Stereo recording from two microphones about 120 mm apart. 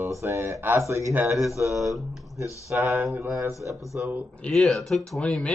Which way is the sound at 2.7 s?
25° right (ahead or behind).